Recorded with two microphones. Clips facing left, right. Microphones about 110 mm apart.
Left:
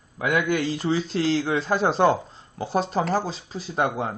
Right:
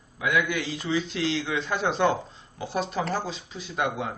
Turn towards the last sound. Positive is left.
turn(degrees=35)  # may be behind; listen again after turning